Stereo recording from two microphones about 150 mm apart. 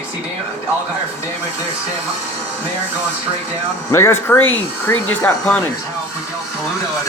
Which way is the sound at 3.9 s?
20° left (ahead or behind).